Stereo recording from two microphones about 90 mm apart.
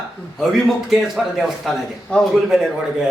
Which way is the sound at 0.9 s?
Centre (ahead or behind).